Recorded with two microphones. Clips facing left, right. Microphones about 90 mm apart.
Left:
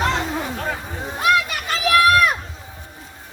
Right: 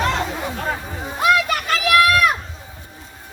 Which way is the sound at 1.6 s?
30° left (ahead or behind).